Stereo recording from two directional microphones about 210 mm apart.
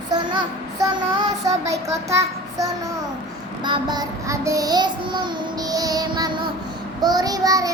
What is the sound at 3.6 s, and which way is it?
Child singing, 20° right (ahead or behind).